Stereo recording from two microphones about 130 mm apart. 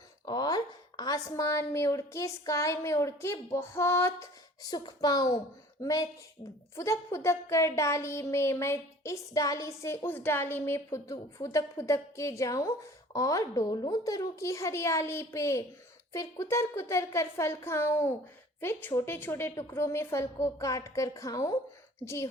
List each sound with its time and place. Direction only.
0.3 s speech: 30° left (ahead or behind)